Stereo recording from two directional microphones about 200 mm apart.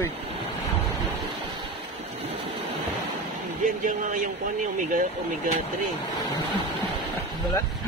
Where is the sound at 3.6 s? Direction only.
40° right (ahead or behind).